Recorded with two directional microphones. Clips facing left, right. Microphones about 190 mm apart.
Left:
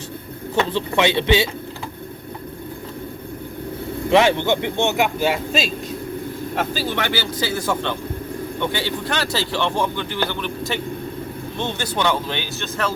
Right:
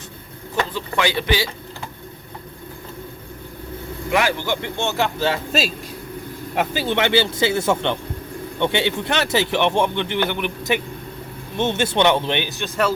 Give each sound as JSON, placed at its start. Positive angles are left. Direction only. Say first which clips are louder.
{"t": 0.7, "sound": "speech", "louder": "left 4 dB", "side_deg": 25}
{"t": 4.1, "sound": "speech", "louder": "left 5 dB", "side_deg": 25}
{"t": 5.5, "sound": "a man's voice", "louder": "even", "side_deg": -5}
{"t": 6.6, "sound": "speech", "louder": "right 4 dB", "side_deg": -20}